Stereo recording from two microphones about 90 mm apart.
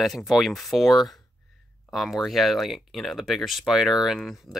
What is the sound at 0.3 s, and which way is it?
Speech, centre (ahead or behind).